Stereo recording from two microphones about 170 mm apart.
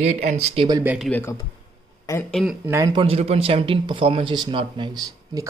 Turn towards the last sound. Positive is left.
turn(degrees=-25)  # may be behind; listen again after turning